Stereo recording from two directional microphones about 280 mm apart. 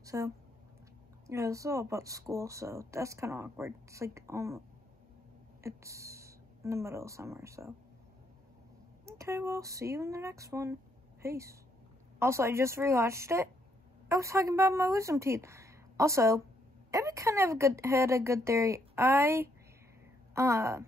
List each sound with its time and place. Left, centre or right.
0.0 s a sound: centre
1.2 s a woman's voice: centre
9.0 s a woman's voice: centre